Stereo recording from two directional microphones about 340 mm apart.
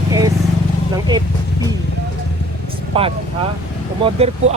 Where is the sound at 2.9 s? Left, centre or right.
Centre.